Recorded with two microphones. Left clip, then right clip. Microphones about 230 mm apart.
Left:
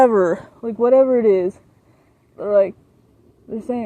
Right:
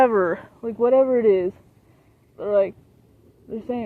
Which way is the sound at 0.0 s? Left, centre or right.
Left.